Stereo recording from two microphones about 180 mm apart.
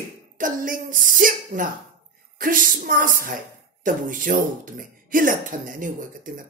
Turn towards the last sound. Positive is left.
turn(degrees=-50)  # may be behind; listen again after turning